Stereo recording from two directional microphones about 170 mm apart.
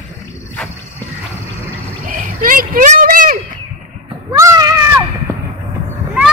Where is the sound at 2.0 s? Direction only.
55° right (ahead or behind).